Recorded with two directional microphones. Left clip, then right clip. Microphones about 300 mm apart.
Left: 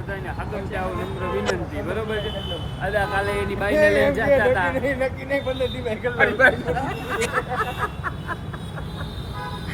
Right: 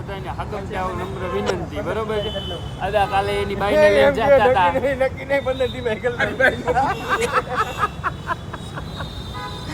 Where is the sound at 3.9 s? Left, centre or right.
Right.